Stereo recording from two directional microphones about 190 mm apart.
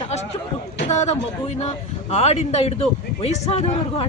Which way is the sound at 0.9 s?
35° left (ahead or behind).